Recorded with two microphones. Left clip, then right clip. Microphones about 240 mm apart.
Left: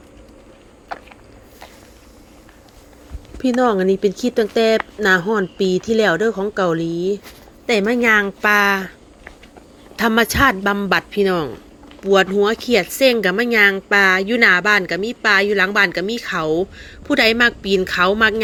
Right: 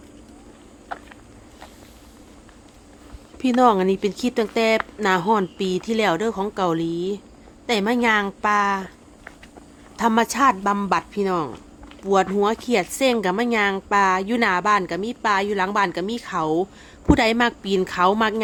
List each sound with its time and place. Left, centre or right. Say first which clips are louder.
0.9 s a sound: left 3 dB; left
3.6 s speech: left 1 dB; centre
9.9 s speech: left 3 dB; centre